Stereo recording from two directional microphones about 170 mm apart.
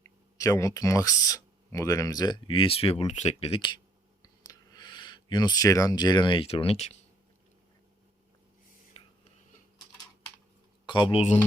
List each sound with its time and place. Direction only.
0.0 s speech: 20° left (ahead or behind); by 6.9 s 35° left (ahead or behind)
8.9 s whispering: 30° left (ahead or behind)
10.8 s speech: 25° left (ahead or behind)